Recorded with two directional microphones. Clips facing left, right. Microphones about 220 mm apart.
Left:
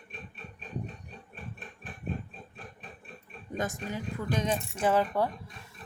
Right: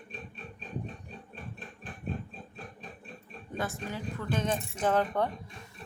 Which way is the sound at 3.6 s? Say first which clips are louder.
Left 1 dB; 15° left (ahead or behind).